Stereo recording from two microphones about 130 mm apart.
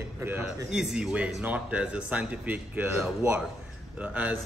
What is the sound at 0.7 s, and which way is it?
Speech, 5° right (ahead or behind).